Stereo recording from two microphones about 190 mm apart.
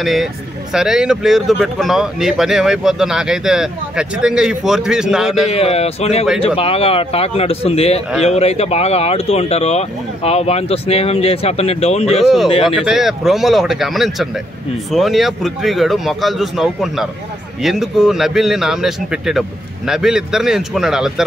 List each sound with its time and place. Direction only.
0.0 s speech: centre (ahead or behind)
5.5 s speech: 30° left (ahead or behind)
12.6 s speech: centre (ahead or behind)